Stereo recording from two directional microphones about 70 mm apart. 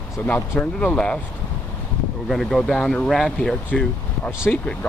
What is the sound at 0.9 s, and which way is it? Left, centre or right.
Speech, centre.